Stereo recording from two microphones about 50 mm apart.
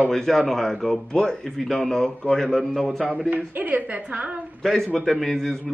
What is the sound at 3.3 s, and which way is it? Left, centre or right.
A woman's voice, right.